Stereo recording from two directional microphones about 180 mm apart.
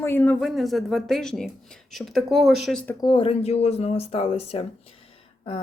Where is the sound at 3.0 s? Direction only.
30° left (ahead or behind).